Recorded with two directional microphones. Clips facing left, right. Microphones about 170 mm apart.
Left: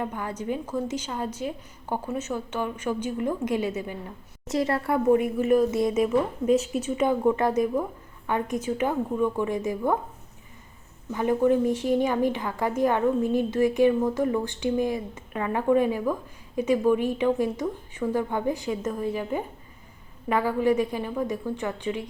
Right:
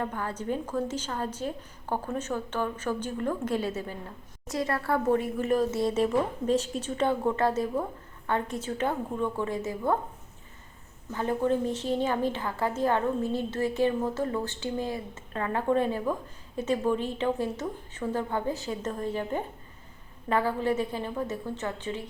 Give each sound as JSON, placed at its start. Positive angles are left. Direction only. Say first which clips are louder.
{"t": 0.0, "sound": "a woman's voice", "louder": "left 1 dB", "side_deg": 15}
{"t": 4.4, "sound": "a woman's voice", "louder": "left 4 dB", "side_deg": 25}
{"t": 5.4, "sound": "a woman's voice", "louder": "left 4 dB", "side_deg": 10}
{"t": 11.1, "sound": "a woman's voice", "louder": "left 5 dB", "side_deg": 15}